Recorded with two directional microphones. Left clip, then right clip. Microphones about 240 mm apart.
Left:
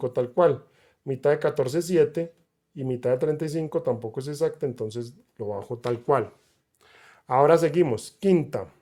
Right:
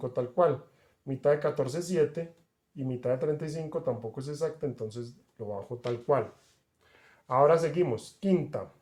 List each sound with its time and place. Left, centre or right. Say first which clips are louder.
0.0 s speech: left 5 dB; left